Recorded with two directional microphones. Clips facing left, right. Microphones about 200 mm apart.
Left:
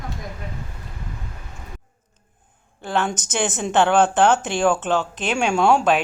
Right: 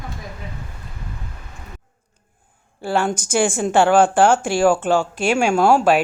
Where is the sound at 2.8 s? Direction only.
10° right (ahead or behind).